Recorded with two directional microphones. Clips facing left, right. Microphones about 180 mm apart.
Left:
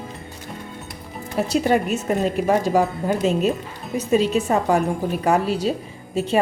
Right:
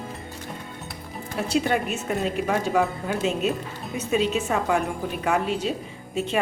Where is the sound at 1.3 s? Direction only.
40° left (ahead or behind).